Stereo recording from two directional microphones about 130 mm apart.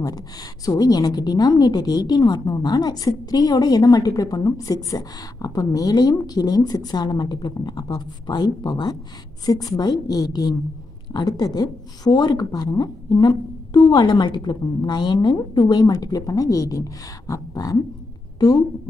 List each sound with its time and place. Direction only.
0.0 s a woman's voice: 30° left (ahead or behind)